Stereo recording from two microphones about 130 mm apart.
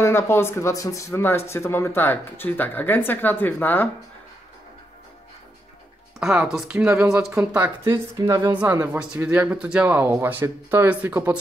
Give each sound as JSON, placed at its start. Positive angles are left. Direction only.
{"t": 0.0, "sound": "speech", "side_deg": 20}
{"t": 6.1, "sound": "speech", "side_deg": -5}